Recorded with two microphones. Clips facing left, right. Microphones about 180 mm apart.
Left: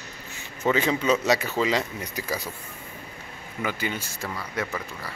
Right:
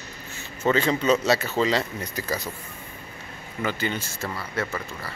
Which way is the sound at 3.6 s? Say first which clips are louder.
Right 2 dB; 10° left (ahead or behind).